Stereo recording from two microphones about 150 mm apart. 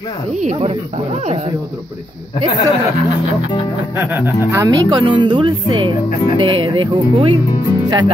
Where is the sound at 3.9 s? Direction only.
15° right (ahead or behind).